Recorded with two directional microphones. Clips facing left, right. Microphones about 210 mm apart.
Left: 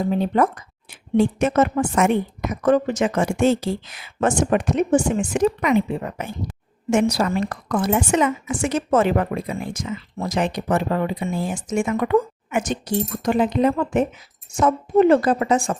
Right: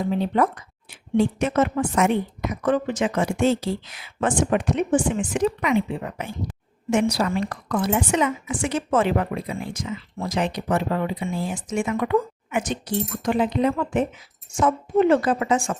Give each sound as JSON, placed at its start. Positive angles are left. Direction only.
{"t": 0.0, "sound": "a woman's voice", "side_deg": 45}